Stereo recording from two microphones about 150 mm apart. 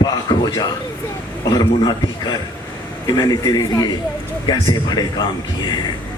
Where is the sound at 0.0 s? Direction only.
25° left (ahead or behind).